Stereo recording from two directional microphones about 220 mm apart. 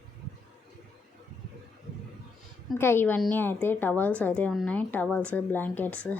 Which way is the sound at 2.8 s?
10° left (ahead or behind).